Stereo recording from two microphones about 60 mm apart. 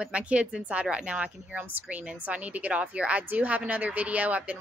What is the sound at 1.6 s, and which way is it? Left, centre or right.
Speech, right.